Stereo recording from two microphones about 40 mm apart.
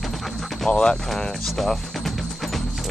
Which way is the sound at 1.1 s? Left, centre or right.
Centre.